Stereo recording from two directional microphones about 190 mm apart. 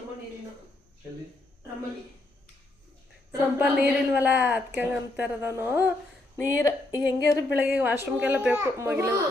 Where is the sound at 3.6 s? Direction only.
5° right (ahead or behind).